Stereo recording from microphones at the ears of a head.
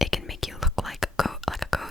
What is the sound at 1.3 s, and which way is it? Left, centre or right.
Beatboxing, centre.